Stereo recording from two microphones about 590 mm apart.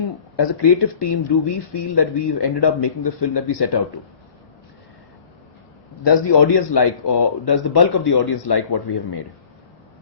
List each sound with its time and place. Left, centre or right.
0.3 s speech: left
6.1 s speech: left